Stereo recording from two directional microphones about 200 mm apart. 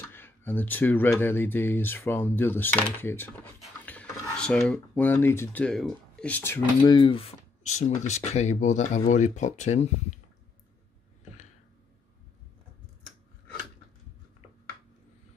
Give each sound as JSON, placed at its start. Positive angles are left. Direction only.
{"t": 0.1, "sound": "speech", "side_deg": 10}
{"t": 7.0, "sound": "speech", "side_deg": 25}